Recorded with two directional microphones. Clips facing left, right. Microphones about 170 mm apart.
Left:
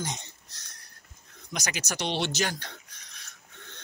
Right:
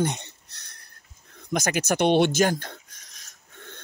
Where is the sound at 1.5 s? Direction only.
50° right (ahead or behind).